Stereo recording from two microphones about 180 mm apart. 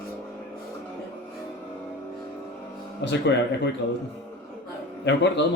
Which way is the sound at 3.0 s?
70° left (ahead or behind).